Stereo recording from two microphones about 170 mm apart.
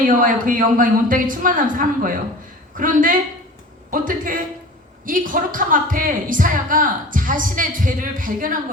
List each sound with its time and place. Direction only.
0.0 s a woman's voice: 50° right (ahead or behind)